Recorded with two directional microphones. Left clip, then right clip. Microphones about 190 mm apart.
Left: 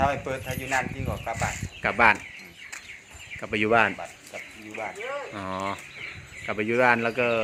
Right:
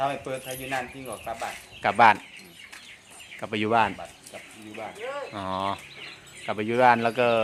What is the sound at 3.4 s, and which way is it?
Speech, 10° right (ahead or behind).